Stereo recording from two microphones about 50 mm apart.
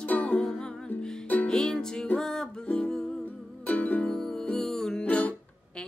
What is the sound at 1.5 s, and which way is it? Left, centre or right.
Music, centre.